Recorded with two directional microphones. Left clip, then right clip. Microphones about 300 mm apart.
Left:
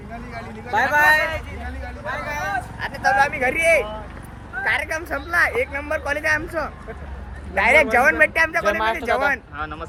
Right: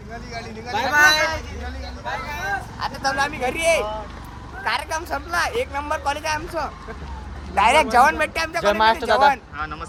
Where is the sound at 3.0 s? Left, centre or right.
Centre.